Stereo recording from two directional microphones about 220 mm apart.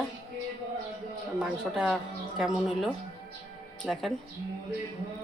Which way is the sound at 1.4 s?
5° right (ahead or behind).